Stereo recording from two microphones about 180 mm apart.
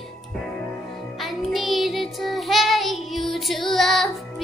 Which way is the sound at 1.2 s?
Centre (ahead or behind).